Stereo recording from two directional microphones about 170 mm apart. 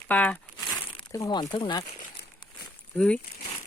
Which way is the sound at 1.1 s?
20° left (ahead or behind).